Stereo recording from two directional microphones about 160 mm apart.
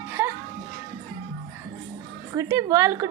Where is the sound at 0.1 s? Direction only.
15° right (ahead or behind).